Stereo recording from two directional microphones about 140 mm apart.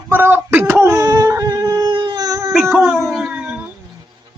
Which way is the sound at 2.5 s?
5° right (ahead or behind).